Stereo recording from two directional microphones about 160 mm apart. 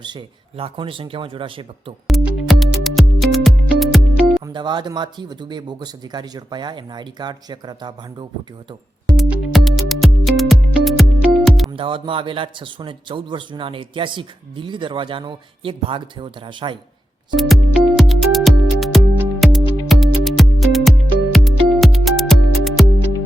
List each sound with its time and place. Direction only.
0.0 s a man's voice: 30° right (ahead or behind)
2.0 s music: centre (ahead or behind)
4.4 s speech: 30° right (ahead or behind)
9.0 s music: centre (ahead or behind)
11.8 s a man's voice: 35° right (ahead or behind)
17.3 s music: centre (ahead or behind)